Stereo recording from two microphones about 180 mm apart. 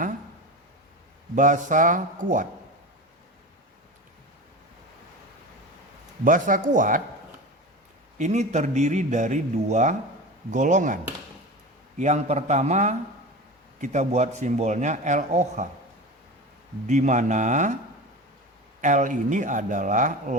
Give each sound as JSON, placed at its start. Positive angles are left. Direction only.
{"t": 1.4, "sound": "speech", "side_deg": -45}
{"t": 6.2, "sound": "speech", "side_deg": -50}
{"t": 8.2, "sound": "a man's voice", "side_deg": -40}
{"t": 16.8, "sound": "speech", "side_deg": -40}
{"t": 18.8, "sound": "speech", "side_deg": -45}